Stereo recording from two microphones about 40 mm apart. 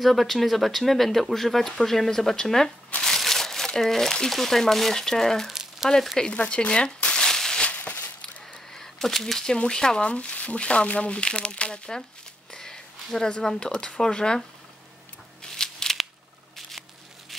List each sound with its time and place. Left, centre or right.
0.0 s speech: centre
3.0 s crumpling: centre
4.3 s speech: centre
5.5 s frying: centre
6.3 s speech: left
7.2 s a sound: centre
7.6 s a sound: left
8.7 s speech: centre
12.5 s a sound: centre
13.6 s speech: left
15.4 s shuffling cards: centre